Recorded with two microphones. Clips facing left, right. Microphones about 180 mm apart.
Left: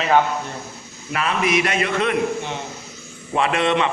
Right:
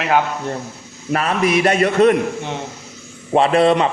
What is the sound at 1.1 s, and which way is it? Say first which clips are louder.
A man's voice: right 4 dB; 40° right (ahead or behind).